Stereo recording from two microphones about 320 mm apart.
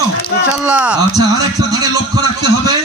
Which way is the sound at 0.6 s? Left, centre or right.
Centre.